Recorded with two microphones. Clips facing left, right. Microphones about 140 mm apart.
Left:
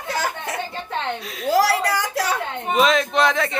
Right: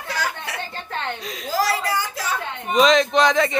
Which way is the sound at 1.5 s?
70° left (ahead or behind).